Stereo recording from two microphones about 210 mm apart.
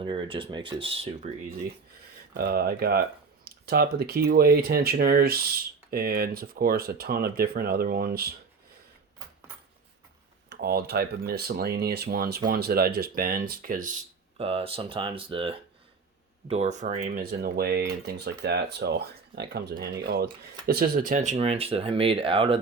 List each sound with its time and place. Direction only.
0.0 s speech: 25° right (ahead or behind)
2.3 s speech: 45° right (ahead or behind)
10.5 s speech: 50° right (ahead or behind)
14.3 s speech: 25° right (ahead or behind)